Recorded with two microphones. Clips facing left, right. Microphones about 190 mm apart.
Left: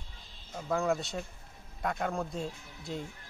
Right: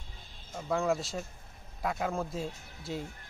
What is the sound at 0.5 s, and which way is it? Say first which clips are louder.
Speech: even; 5° right (ahead or behind).